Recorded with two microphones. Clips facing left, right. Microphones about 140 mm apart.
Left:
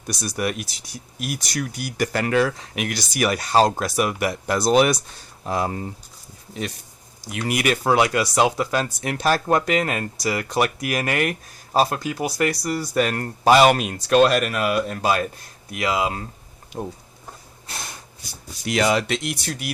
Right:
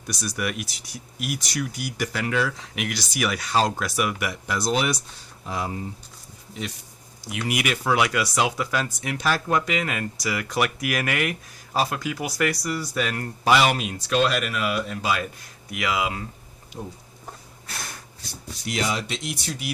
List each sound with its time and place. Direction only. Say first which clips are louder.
0.1 s speech: left 3 dB; 35° left (ahead or behind); by 5.9 s 50° left (ahead or behind)
7.3 s speech: left 4 dB; 40° left (ahead or behind)
12.6 s speech: left 5 dB; 40° left (ahead or behind)
17.7 s snort: left 1 dB; 20° left (ahead or behind)
18.6 s speech: left 7 dB; 70° left (ahead or behind)